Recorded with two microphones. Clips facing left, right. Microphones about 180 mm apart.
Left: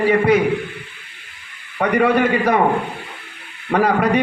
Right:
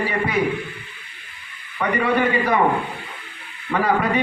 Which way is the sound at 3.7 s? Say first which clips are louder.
Left 5 dB; 55° left (ahead or behind).